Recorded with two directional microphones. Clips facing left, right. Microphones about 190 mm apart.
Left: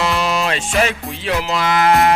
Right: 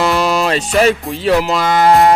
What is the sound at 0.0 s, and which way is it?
Music, 45° right (ahead or behind).